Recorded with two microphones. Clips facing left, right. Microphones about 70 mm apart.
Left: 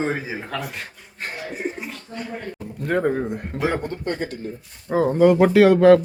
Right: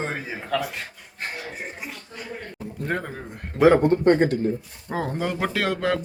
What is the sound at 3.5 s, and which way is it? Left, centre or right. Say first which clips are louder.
Speech: right 10 dB; right.